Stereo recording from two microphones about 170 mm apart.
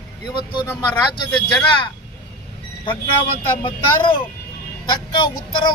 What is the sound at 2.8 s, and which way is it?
Speech, 30° left (ahead or behind).